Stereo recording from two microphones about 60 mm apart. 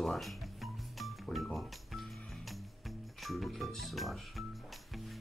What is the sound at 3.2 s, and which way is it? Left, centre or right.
Speech, centre.